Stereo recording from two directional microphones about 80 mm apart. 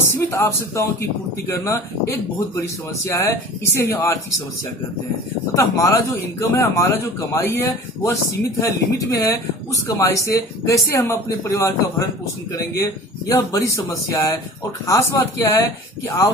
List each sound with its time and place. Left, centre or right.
0.0 s speech: left
5.6 s speech: left